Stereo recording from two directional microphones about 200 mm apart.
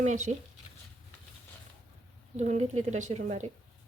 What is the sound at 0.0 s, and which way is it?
Speech, 35° right (ahead or behind).